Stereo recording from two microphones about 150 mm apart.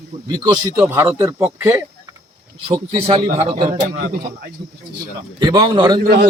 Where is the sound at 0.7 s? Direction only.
15° right (ahead or behind).